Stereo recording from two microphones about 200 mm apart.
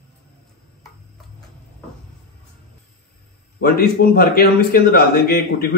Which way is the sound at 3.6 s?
50° left (ahead or behind).